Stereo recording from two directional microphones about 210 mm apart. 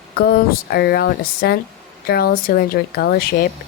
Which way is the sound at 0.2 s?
45° left (ahead or behind).